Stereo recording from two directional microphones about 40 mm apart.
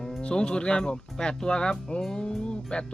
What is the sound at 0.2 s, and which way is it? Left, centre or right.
Speech, left.